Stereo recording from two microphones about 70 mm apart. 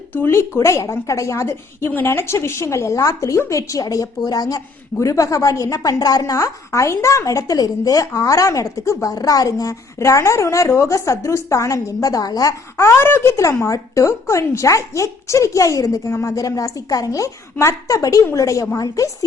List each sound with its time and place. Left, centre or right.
0.1 s a woman's voice: left
4.9 s a woman's voice: left